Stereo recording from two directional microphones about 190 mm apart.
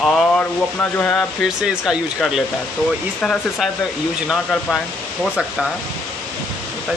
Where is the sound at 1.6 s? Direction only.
5° right (ahead or behind).